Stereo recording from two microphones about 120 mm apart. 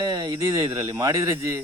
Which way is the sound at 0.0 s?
30° right (ahead or behind).